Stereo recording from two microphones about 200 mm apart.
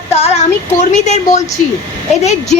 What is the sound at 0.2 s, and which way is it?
Child singing, 35° left (ahead or behind).